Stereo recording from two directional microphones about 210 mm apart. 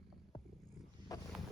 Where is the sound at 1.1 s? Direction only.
15° left (ahead or behind).